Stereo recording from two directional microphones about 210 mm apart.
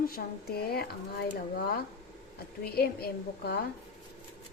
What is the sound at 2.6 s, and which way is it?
Speech, 45° left (ahead or behind).